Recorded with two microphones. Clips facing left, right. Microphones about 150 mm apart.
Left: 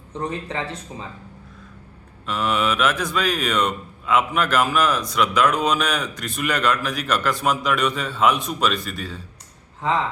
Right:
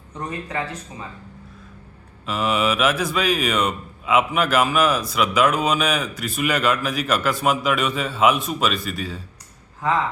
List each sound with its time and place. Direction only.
0.2 s speech: 25° left (ahead or behind)
2.2 s speech: 5° right (ahead or behind)